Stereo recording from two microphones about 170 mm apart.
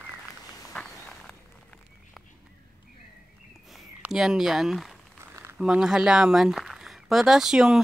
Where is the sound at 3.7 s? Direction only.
5° right (ahead or behind).